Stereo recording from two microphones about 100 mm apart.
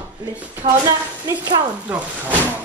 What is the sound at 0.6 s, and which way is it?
Speech, 70° right (ahead or behind).